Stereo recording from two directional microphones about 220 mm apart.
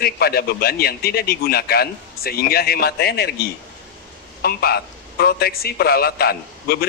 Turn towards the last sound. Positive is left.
turn(degrees=45)  # may be behind; listen again after turning